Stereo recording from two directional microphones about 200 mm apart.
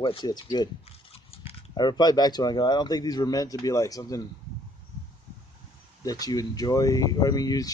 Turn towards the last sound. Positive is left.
turn(degrees=20)  # may be behind; listen again after turning